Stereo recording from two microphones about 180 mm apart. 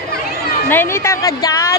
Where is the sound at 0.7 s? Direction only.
15° left (ahead or behind).